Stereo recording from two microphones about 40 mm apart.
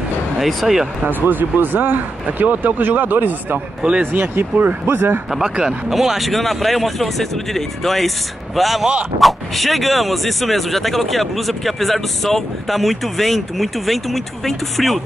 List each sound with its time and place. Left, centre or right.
0.4 s speech: centre
1.0 s speech: right
3.5 s speech: right
4.0 s speech: right
4.8 s a man's voice: right
5.3 s speech: centre